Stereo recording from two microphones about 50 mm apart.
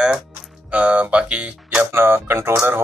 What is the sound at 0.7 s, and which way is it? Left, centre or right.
Speech, right.